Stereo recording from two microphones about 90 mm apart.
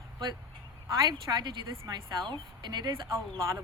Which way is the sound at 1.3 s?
35° right (ahead or behind).